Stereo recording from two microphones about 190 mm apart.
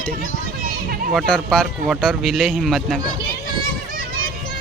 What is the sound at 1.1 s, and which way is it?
Speech, 5° left (ahead or behind).